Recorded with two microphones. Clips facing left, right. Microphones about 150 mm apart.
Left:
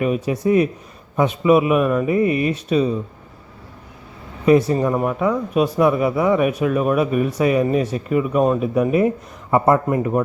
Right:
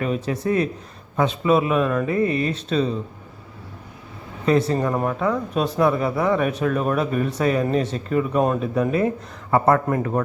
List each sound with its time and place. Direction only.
0.0 s speech: 10° left (ahead or behind)
4.4 s speech: 15° left (ahead or behind)